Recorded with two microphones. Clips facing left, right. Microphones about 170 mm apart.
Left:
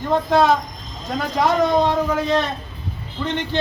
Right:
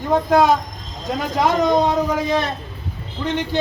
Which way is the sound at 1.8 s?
10° right (ahead or behind).